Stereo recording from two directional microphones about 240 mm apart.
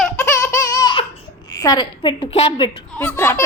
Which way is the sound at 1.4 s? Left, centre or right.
Centre.